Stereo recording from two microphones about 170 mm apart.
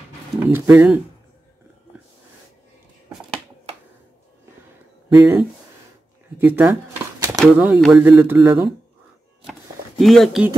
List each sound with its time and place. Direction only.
0.4 s speech: 10° right (ahead or behind)
5.1 s speech: 20° right (ahead or behind)
9.5 s a sound: centre (ahead or behind)